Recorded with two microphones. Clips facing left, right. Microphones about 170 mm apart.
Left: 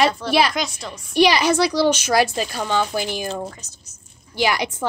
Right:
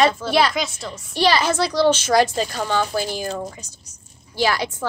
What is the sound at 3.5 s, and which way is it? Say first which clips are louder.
Speech: right 3 dB; 10° right (ahead or behind).